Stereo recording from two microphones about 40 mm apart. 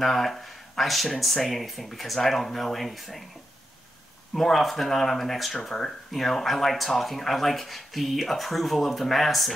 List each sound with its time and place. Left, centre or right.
0.0 s speech: centre
4.3 s speech: centre